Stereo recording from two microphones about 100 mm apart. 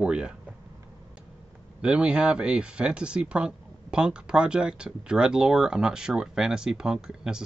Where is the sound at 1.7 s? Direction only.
10° right (ahead or behind).